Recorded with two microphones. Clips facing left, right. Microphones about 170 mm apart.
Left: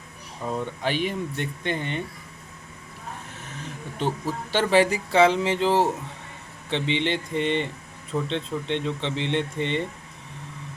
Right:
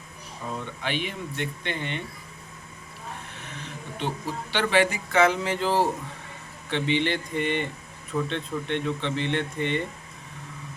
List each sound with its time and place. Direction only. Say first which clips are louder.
0.8 s speech: left 4 dB; 45° left (ahead or behind)
3.9 s speech: left 4 dB; 45° left (ahead or behind); by 9.8 s 25° left (ahead or behind)